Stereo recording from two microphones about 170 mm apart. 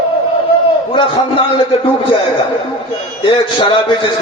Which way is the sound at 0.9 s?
30° left (ahead or behind).